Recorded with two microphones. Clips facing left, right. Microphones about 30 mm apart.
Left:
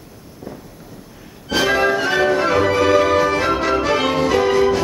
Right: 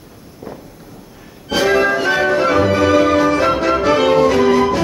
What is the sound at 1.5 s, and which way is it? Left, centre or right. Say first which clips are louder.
Music: right 2 dB; centre.